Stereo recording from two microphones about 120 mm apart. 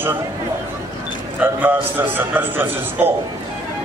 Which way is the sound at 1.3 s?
15° right (ahead or behind).